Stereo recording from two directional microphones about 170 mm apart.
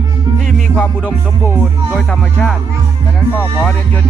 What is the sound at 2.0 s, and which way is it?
Music, 5° left (ahead or behind).